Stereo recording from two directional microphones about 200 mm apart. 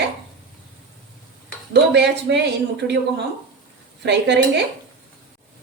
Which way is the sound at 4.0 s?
60° right (ahead or behind).